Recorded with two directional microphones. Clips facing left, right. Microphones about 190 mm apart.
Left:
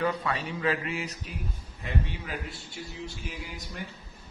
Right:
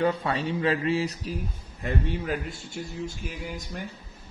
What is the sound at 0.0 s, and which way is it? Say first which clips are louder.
A man's voice: right 4 dB; 30° right (ahead or behind).